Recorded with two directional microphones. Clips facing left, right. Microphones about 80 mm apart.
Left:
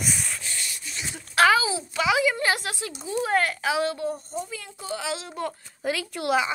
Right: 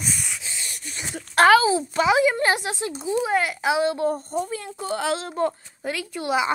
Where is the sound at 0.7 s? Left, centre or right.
Right.